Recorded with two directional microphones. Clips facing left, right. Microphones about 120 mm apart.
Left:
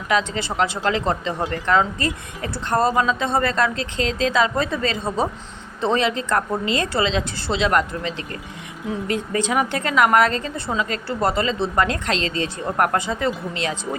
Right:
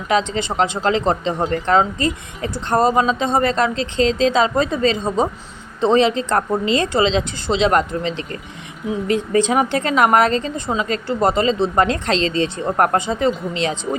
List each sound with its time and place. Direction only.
0.1 s speech: 25° right (ahead or behind)